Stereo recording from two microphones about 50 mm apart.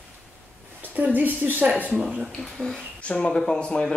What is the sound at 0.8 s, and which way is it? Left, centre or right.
Speech, right.